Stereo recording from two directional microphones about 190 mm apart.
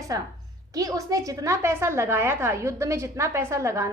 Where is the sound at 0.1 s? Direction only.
20° right (ahead or behind).